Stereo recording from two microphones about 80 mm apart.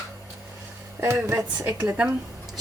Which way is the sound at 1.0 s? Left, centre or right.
Right.